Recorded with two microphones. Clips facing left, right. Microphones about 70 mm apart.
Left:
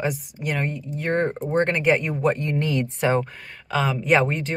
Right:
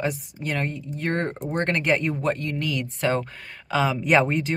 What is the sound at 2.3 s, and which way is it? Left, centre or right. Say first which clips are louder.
Speech: left 4 dB; left.